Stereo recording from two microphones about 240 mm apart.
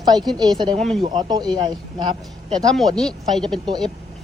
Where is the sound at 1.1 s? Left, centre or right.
Centre.